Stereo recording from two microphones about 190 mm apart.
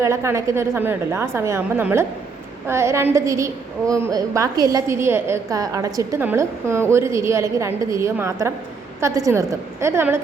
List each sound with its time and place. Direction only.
0.0 s a woman's voice: 15° right (ahead or behind)